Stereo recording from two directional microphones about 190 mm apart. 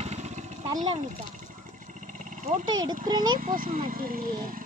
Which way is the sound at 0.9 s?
40° right (ahead or behind).